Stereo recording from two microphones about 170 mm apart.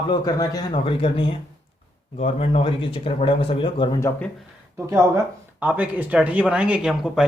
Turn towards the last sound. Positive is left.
turn(degrees=0)  # may be behind; listen again after turning